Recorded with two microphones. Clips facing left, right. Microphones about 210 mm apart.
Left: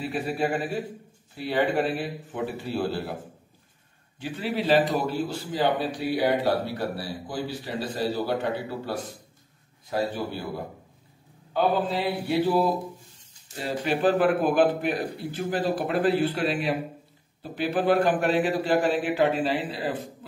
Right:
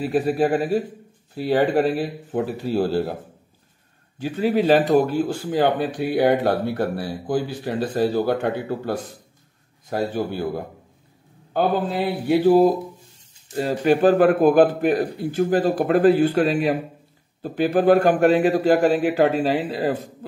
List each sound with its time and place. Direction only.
0.0 s speech: 40° right (ahead or behind)
4.2 s a man's voice: 45° right (ahead or behind)
11.5 s a man's voice: 50° right (ahead or behind)